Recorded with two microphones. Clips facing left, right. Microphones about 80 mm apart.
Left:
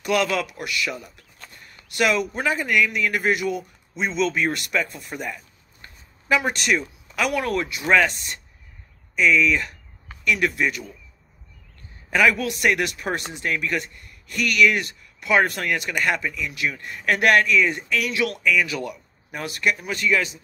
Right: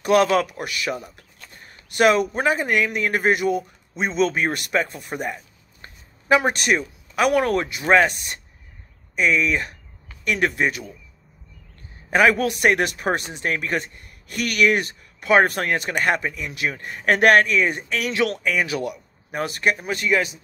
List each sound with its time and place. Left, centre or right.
0.0 s a man's voice: right
7.3 s speech: right
12.1 s speech: right